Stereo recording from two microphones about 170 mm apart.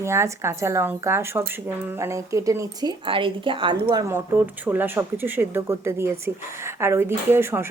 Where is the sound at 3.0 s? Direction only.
30° right (ahead or behind).